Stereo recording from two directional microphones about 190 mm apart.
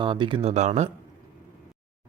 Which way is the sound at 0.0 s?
25° right (ahead or behind).